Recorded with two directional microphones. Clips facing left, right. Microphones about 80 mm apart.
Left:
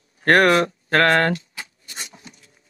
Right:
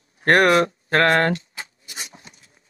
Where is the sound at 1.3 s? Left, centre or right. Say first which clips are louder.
Even; right.